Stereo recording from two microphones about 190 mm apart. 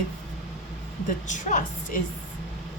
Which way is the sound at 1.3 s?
40° left (ahead or behind).